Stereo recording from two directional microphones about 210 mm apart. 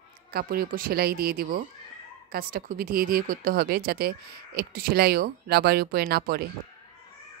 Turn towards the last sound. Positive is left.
turn(degrees=-50)  # may be behind; listen again after turning